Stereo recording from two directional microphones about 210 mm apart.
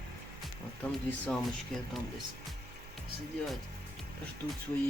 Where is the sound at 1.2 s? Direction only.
5° left (ahead or behind).